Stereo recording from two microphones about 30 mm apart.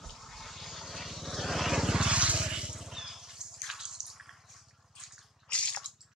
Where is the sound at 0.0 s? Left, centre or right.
Centre.